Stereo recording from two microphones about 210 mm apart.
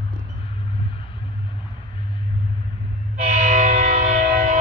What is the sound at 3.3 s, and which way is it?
Music, 40° right (ahead or behind).